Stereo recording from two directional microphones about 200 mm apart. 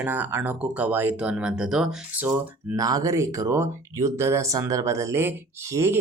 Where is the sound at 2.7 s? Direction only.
15° right (ahead or behind).